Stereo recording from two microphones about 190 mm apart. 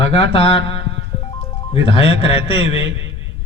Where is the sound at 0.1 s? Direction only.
30° left (ahead or behind).